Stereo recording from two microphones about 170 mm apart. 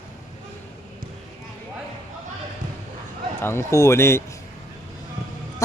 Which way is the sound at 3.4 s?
15° left (ahead or behind).